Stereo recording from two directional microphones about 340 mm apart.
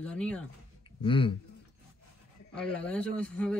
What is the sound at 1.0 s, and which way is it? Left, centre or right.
Speech, centre.